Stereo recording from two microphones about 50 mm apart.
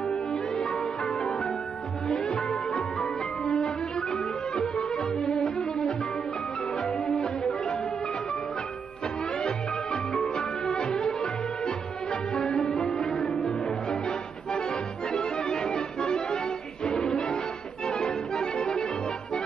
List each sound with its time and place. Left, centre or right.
0.3 s music: centre
7.4 s music: centre
9.4 s music: centre
10.8 s music: centre
12.4 s music: centre
14.7 s music: centre